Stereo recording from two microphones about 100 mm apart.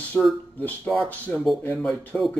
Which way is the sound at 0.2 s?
20° left (ahead or behind).